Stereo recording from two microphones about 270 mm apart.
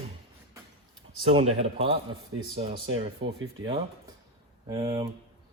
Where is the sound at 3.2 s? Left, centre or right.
Right.